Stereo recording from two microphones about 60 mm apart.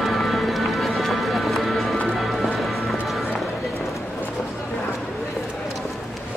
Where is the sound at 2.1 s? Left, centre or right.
Centre.